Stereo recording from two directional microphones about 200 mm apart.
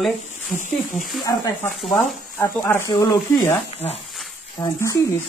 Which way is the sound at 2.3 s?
15° left (ahead or behind).